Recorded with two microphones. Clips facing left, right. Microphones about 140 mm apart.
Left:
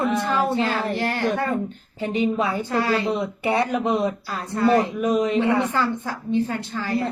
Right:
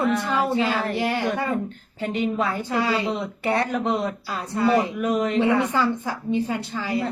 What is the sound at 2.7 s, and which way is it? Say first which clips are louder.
Speech: left 1 dB; 15° right (ahead or behind).